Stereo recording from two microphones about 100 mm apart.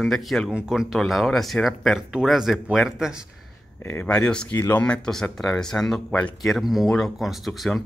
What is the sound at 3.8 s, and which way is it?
Speech, 25° left (ahead or behind).